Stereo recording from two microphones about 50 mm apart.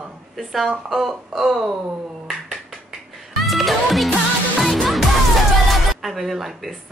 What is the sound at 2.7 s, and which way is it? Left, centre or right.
Music, centre.